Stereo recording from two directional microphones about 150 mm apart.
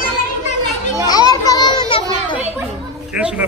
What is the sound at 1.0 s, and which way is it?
Children playing, 25° left (ahead or behind).